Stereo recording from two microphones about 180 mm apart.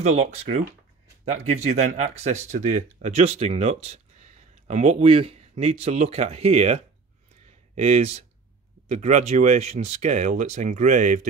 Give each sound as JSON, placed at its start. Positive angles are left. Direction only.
{"t": 0.0, "sound": "speech", "side_deg": -40}